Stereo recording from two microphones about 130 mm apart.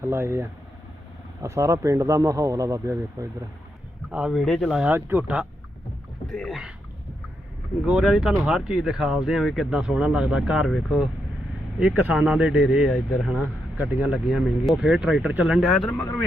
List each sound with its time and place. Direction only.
0.0 s speech: 20° right (ahead or behind)
4.1 s speech: 5° right (ahead or behind)
4.9 s speech: 15° right (ahead or behind)
6.2 s speech: centre (ahead or behind)
7.9 s speech: 5° right (ahead or behind)
15.9 s speech: 15° left (ahead or behind)